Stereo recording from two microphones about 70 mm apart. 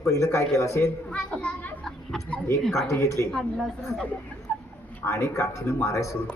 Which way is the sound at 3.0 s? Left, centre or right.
Left.